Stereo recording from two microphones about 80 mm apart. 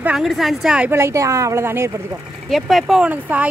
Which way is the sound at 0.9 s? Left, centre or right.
Right.